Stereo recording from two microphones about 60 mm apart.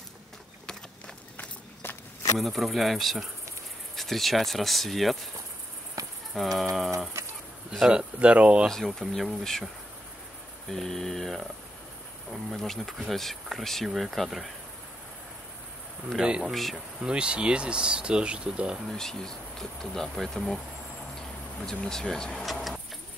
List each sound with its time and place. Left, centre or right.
1.3 s walk: left
2.3 s speech: centre
6.0 s cricket: right
6.3 s speech: centre
7.2 s bird: right
7.9 s speech: centre
8.6 s speech: centre
10.7 s speech: centre
12.4 s speech: centre
16.4 s speech: centre
17.0 s speech: centre
18.9 s speech: centre
22.4 s vehicle: centre